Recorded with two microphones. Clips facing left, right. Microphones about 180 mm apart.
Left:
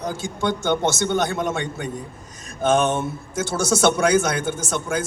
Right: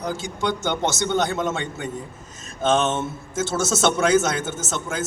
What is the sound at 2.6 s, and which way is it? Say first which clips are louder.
A man's voice: left 2 dB; 20° right (ahead or behind).